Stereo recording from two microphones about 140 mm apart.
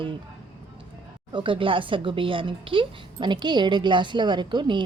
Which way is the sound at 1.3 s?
35° right (ahead or behind).